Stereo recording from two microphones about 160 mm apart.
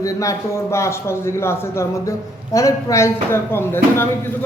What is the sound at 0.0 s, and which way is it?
A man's voice, 20° left (ahead or behind).